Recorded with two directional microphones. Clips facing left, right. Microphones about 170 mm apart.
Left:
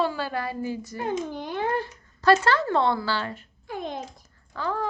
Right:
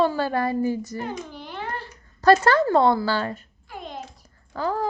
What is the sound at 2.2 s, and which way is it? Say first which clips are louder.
A woman's voice: right 3 dB; 45° right (ahead or behind).